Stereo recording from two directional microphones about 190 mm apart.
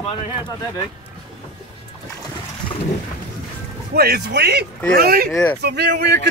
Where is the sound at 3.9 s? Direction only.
55° right (ahead or behind).